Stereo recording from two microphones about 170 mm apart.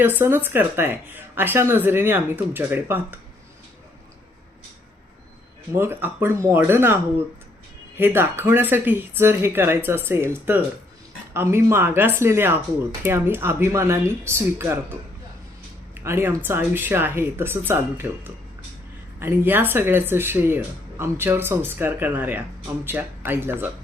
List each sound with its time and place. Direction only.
0.0 s speech: 10° right (ahead or behind)
5.7 s speech: 15° right (ahead or behind)
16.0 s speech: 15° right (ahead or behind)